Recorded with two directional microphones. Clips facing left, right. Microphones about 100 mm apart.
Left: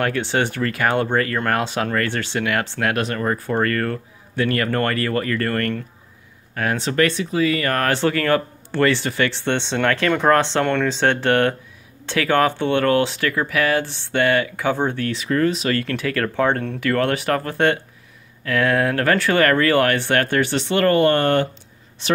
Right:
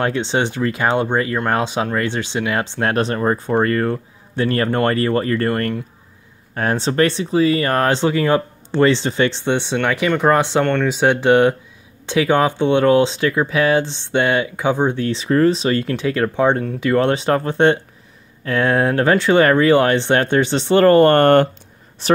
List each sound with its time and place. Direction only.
0.0 s speech: 20° right (ahead or behind)
2.8 s speech: 30° right (ahead or behind)
6.5 s speech: 30° right (ahead or behind); by 10.6 s 15° right (ahead or behind)
10.6 s speech: centre (ahead or behind)
10.9 s speech: 10° right (ahead or behind)
15.0 s speech: 30° right (ahead or behind); by 21.5 s 50° right (ahead or behind)
22.0 s a woman's voice: 40° right (ahead or behind)